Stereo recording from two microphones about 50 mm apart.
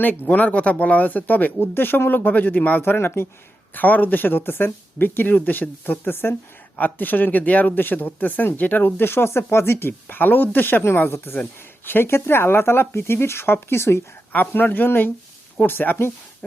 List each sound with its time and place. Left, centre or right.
0.3 s speech: left
14.3 s speech: left
16.4 s a sound: left